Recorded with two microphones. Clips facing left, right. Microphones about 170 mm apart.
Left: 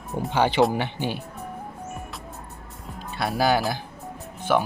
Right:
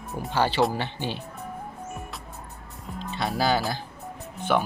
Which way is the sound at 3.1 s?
10° left (ahead or behind).